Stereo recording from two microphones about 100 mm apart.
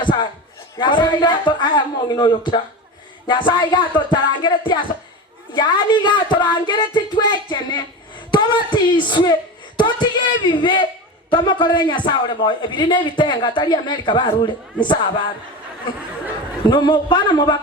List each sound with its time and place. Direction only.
0.0 s a sound: 50° left (ahead or behind)
0.8 s a man's voice: 50° left (ahead or behind)
16.6 s a man's voice: 45° left (ahead or behind)